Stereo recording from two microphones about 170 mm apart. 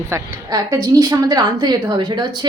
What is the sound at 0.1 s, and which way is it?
A woman's voice, 20° right (ahead or behind).